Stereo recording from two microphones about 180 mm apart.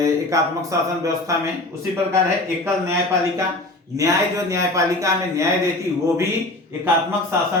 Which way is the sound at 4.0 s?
15° right (ahead or behind).